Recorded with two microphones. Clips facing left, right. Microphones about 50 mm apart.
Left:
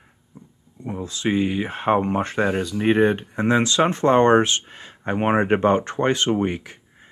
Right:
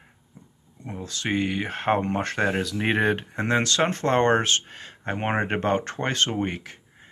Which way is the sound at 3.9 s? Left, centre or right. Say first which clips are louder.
Left 7 dB; centre.